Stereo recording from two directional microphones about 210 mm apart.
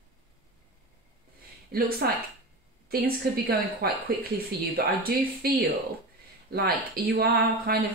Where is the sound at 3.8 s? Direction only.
45° right (ahead or behind).